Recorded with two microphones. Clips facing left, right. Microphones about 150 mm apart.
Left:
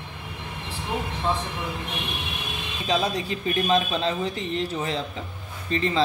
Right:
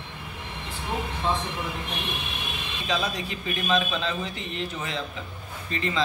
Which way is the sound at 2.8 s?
35° left (ahead or behind).